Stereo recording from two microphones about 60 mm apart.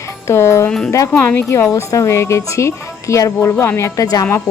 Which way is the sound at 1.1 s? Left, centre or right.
Left.